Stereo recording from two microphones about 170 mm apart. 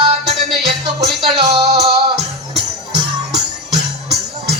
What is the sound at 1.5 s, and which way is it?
Music, 40° right (ahead or behind).